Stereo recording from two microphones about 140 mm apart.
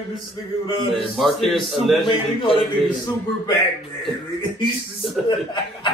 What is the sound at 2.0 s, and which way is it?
Speech, 35° left (ahead or behind).